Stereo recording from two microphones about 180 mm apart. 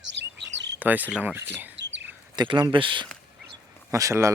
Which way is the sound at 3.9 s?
15° right (ahead or behind).